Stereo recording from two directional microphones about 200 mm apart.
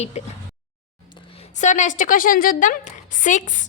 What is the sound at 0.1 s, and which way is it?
Speech, 35° left (ahead or behind).